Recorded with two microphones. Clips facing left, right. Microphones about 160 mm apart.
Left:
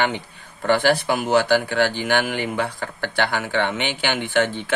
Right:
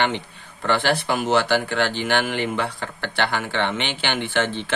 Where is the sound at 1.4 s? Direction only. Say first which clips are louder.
Left 2 dB; 50° left (ahead or behind).